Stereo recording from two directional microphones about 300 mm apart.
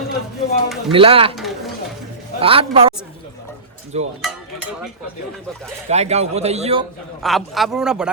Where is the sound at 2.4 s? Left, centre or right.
Centre.